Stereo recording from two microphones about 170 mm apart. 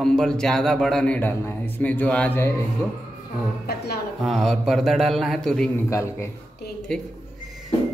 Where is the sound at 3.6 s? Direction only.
70° left (ahead or behind).